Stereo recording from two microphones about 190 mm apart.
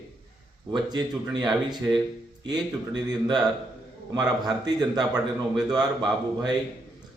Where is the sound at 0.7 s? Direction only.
25° right (ahead or behind).